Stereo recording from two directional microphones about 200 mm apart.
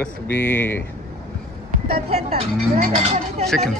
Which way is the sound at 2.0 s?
30° right (ahead or behind).